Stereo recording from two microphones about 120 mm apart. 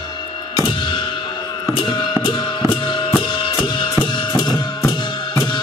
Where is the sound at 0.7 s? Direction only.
40° left (ahead or behind).